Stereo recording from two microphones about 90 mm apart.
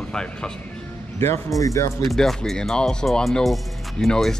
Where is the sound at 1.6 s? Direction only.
35° left (ahead or behind).